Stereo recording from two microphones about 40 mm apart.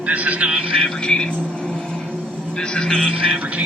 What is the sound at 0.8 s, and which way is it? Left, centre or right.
Music, centre.